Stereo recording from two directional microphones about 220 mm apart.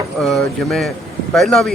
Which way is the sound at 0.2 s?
Centre (ahead or behind).